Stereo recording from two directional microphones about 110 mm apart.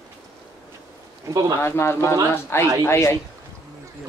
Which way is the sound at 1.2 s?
35° right (ahead or behind).